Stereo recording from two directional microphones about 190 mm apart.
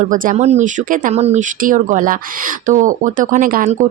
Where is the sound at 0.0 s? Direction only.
45° right (ahead or behind).